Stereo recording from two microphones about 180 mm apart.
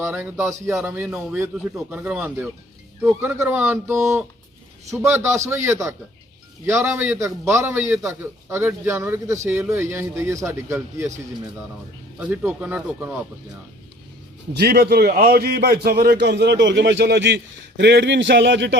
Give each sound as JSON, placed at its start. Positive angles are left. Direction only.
{"t": 0.0, "sound": "a man's voice", "side_deg": -10}
{"t": 12.2, "sound": "a man's voice", "side_deg": -10}
{"t": 14.5, "sound": "a man's voice", "side_deg": -60}